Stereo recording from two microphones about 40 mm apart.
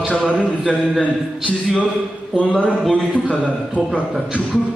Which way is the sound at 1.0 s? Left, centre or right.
Left.